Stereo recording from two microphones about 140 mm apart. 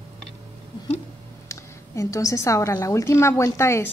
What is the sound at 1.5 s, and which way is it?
A woman's voice, 20° left (ahead or behind).